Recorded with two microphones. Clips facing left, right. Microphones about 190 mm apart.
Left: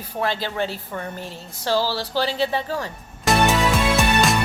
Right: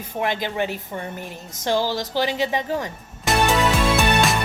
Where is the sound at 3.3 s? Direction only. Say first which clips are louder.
Left 2 dB; centre (ahead or behind).